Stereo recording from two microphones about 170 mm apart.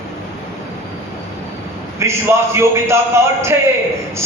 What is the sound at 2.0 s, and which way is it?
A man's voice, 15° right (ahead or behind).